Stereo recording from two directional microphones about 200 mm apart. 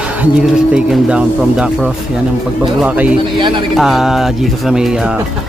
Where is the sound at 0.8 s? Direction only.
5° right (ahead or behind).